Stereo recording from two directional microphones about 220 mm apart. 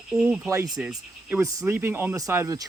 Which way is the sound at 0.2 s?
5° right (ahead or behind).